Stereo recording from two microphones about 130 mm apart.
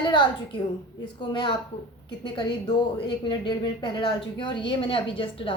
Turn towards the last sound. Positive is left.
turn(degrees=40)  # may be behind; listen again after turning